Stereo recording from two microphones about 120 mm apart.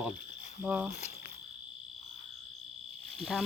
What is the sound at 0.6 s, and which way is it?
Speech, 10° right (ahead or behind).